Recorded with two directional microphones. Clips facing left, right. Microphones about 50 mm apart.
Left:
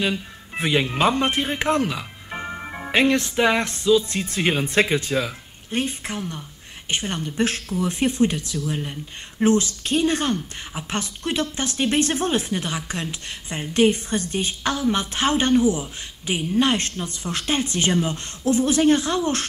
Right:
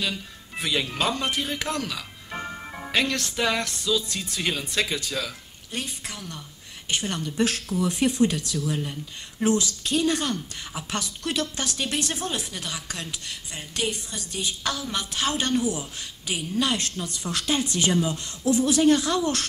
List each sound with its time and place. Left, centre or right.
0.0 s speech: left